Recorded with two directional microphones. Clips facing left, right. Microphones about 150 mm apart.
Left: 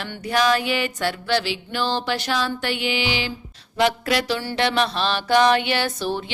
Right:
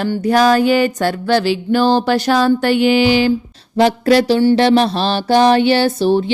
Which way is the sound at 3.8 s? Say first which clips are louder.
Right 9 dB; 35° right (ahead or behind).